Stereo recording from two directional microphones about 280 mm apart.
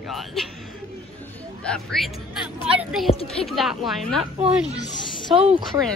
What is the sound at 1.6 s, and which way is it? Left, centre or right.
Music, centre.